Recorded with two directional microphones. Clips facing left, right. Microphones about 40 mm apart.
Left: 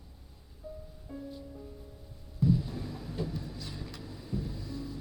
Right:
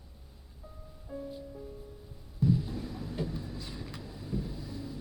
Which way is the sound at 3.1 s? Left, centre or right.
Centre.